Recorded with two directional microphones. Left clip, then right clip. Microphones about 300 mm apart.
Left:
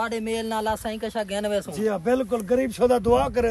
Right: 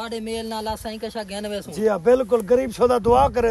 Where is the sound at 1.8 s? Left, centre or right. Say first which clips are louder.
Right 8 dB; right.